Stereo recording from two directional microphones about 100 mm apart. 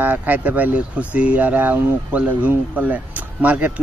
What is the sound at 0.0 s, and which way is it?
Speech, 15° right (ahead or behind).